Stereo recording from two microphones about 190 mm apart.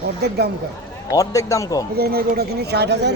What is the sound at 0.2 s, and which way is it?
Speech, 60° right (ahead or behind).